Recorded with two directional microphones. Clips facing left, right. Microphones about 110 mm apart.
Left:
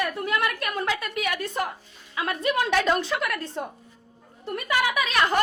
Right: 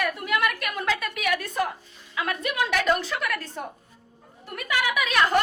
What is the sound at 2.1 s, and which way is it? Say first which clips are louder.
A man's voice: left 2 dB; 25° left (ahead or behind).